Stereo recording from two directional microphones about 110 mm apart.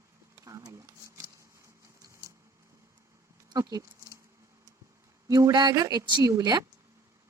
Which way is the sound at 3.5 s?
35° right (ahead or behind).